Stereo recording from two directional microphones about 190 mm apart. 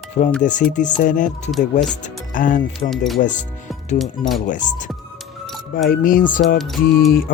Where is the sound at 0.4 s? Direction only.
40° left (ahead or behind).